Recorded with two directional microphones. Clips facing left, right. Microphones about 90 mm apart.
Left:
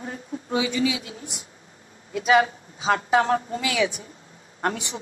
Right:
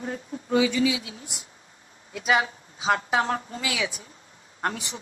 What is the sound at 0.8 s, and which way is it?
Speech, 50° left (ahead or behind).